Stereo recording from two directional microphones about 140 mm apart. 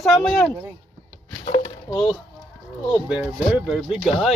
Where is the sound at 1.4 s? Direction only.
50° left (ahead or behind).